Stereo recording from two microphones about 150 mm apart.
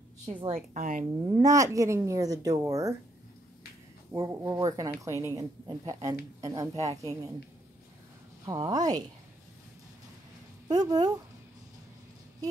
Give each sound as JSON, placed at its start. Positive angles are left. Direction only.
{"t": 0.5, "sound": "speech", "side_deg": -55}
{"t": 1.2, "sound": "speech", "side_deg": -25}
{"t": 4.1, "sound": "speech", "side_deg": -20}
{"t": 8.5, "sound": "speech", "side_deg": -25}
{"t": 10.7, "sound": "speech", "side_deg": -25}